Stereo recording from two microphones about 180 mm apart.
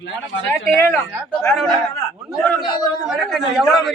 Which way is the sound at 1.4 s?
5° left (ahead or behind).